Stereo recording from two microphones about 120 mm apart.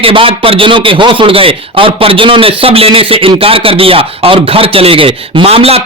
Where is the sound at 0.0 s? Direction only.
50° right (ahead or behind).